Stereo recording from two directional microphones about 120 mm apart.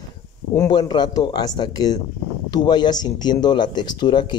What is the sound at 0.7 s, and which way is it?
Speech, 40° left (ahead or behind).